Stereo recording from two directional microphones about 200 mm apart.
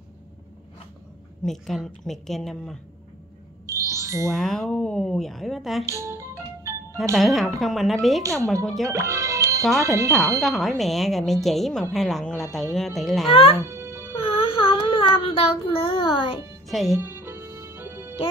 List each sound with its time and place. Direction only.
1.4 s speech: centre (ahead or behind)
3.6 s a sound: 15° right (ahead or behind)
4.3 s speech: centre (ahead or behind)
5.9 s music: 15° right (ahead or behind)
7.2 s speech: centre (ahead or behind)
8.9 s music: 15° right (ahead or behind)
9.8 s speech: 15° right (ahead or behind)
10.4 s speech: centre (ahead or behind)
13.3 s speech: 30° left (ahead or behind)
13.7 s music: 15° right (ahead or behind)
14.1 s child singing: 25° left (ahead or behind)
16.6 s speech: centre (ahead or behind)
17.0 s music: 10° right (ahead or behind)